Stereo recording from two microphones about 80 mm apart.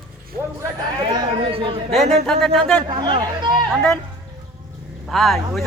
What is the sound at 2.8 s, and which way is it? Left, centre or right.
Speech, right.